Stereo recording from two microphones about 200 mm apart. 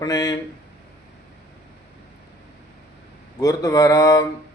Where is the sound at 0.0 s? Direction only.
20° left (ahead or behind).